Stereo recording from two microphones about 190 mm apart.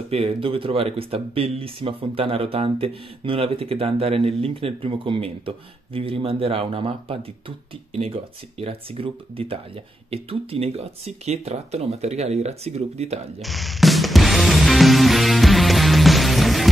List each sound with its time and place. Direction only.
0.1 s speech: 30° right (ahead or behind)
13.4 s music: centre (ahead or behind)